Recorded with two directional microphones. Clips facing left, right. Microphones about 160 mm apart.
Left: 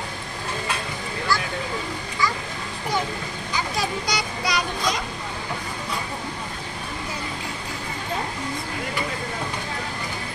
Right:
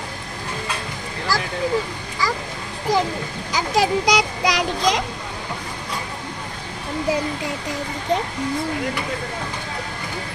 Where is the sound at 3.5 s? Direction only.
90° right.